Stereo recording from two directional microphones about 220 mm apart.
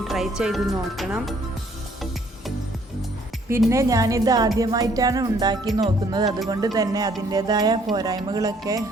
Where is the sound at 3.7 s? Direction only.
15° right (ahead or behind).